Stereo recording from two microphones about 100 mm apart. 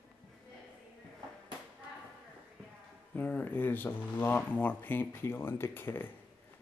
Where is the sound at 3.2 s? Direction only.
20° left (ahead or behind).